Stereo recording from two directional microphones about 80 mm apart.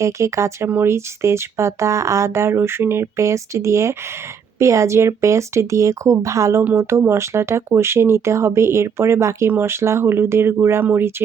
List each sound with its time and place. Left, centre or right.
0.0 s speech: right